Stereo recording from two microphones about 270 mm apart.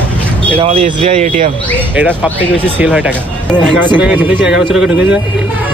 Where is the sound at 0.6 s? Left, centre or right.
Right.